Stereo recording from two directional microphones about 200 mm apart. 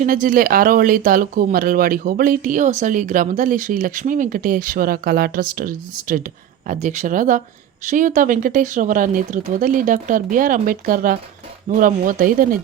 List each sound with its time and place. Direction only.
0.0 s speech: 40° right (ahead or behind)